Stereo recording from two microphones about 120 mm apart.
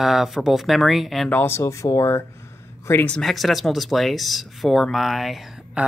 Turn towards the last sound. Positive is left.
turn(degrees=0)  # may be behind; listen again after turning